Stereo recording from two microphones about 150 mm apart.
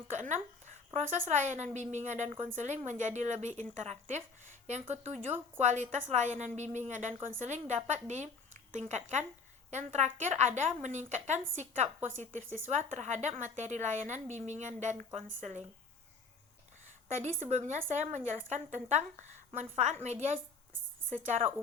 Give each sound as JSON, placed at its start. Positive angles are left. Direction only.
{"t": 0.2, "sound": "a sound", "side_deg": -50}
{"t": 1.3, "sound": "a woman's voice", "side_deg": -50}
{"t": 17.2, "sound": "a woman's voice", "side_deg": -50}